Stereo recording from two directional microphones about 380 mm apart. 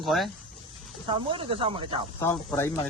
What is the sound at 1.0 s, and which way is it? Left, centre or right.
Speech, centre.